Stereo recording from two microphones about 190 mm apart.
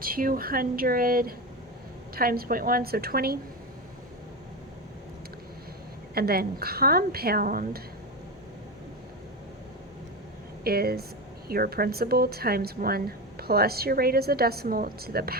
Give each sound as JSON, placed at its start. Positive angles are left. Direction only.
{"t": 0.0, "sound": "a woman's voice", "side_deg": -50}
{"t": 6.1, "sound": "a woman's voice", "side_deg": -55}
{"t": 10.6, "sound": "a woman's voice", "side_deg": -55}